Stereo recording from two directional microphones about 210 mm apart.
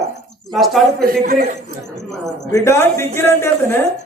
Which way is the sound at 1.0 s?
45° right (ahead or behind).